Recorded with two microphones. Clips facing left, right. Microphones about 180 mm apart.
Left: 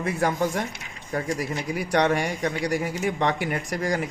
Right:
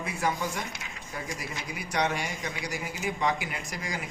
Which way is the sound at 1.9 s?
65° left (ahead or behind).